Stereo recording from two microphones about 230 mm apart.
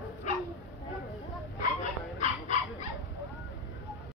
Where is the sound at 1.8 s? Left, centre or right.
Left.